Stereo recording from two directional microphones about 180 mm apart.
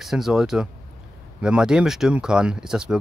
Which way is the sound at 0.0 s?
Centre (ahead or behind).